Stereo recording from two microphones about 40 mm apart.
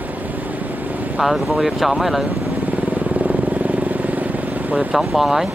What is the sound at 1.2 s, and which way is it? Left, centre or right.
Speech, centre.